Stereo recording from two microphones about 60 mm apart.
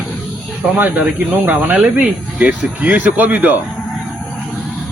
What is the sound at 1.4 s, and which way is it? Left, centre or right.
Speech, right.